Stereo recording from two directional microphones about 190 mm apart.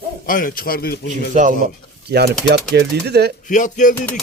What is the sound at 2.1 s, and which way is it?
Speech, 55° right (ahead or behind).